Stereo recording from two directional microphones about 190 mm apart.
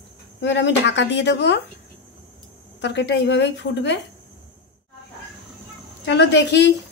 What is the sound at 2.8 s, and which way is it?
Speech, 65° left (ahead or behind).